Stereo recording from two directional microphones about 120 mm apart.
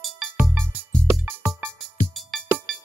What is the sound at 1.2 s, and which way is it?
Music, 15° right (ahead or behind).